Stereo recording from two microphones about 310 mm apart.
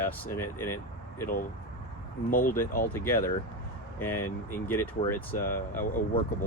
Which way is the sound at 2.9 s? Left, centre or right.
Centre.